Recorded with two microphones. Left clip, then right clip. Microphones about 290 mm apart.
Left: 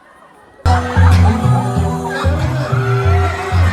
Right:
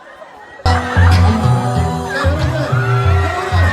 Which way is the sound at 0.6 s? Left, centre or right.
Centre.